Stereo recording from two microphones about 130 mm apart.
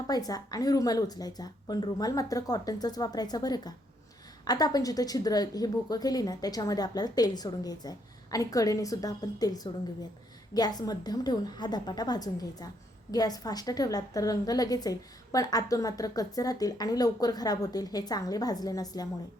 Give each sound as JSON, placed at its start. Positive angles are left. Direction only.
{"t": 0.1, "sound": "a woman's voice", "side_deg": 30}